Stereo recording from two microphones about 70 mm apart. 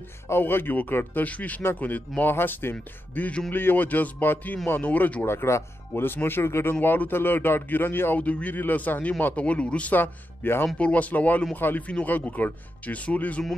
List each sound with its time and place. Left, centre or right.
0.3 s speech: left
5.2 s speech: left
10.8 s speech: centre